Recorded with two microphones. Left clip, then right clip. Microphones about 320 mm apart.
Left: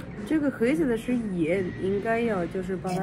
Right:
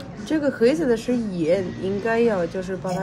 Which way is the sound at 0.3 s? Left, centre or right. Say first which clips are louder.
Right 6 dB; right.